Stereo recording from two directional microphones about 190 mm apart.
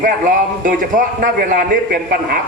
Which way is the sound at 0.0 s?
45° right (ahead or behind).